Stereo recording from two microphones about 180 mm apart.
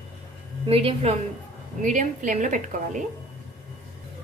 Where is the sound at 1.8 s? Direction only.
45° right (ahead or behind).